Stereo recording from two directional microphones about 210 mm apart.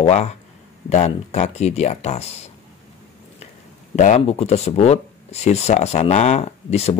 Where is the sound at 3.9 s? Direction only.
30° left (ahead or behind).